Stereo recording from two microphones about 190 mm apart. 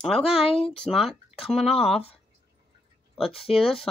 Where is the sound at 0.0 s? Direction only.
Centre (ahead or behind).